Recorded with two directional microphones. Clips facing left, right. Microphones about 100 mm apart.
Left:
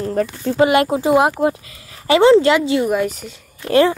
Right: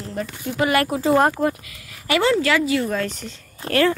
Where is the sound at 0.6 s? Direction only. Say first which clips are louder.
Left 5 dB; 20° left (ahead or behind).